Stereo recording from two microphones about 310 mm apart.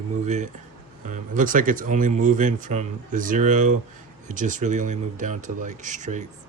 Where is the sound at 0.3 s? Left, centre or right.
Right.